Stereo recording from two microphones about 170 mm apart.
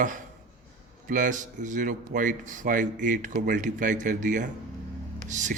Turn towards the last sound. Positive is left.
turn(degrees=-45)  # may be behind; listen again after turning